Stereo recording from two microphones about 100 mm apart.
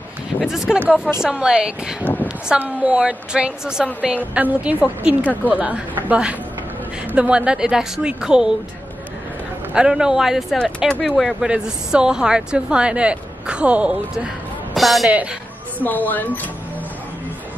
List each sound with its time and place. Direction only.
0.7 s a woman's voice: 15° right (ahead or behind)
5.2 s speech: 15° left (ahead or behind)
5.5 s a woman's voice: 15° right (ahead or behind)
9.8 s a woman's voice: 5° right (ahead or behind)
14.7 s speech: centre (ahead or behind)
15.8 s speech: 15° left (ahead or behind)